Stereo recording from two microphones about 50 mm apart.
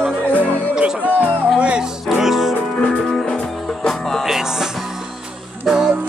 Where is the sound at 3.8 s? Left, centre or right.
Centre.